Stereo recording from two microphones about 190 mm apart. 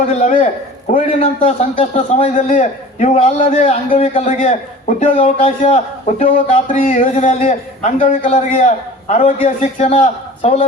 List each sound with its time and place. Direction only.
0.2 s a man's voice: 40° left (ahead or behind)